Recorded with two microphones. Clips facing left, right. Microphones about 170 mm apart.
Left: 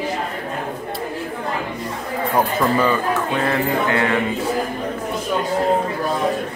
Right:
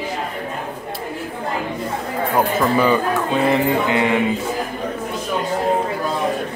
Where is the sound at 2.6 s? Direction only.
5° right (ahead or behind).